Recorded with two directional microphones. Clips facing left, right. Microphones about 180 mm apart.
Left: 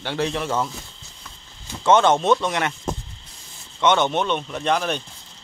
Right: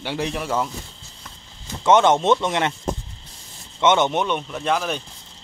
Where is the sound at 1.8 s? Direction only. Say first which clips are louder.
Right 1 dB; 20° right (ahead or behind).